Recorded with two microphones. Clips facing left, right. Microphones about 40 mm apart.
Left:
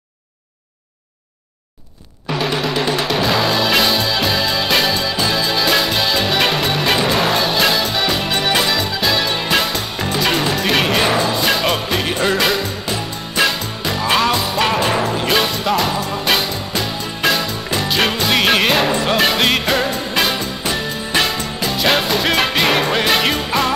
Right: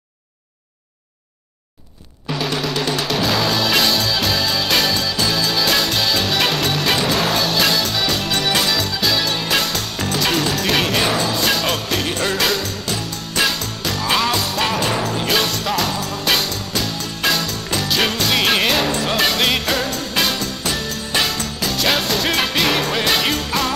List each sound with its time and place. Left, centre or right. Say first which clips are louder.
2.2 s music: left 3 dB; centre